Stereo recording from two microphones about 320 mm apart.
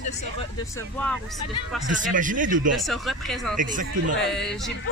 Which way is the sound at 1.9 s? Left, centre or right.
Right.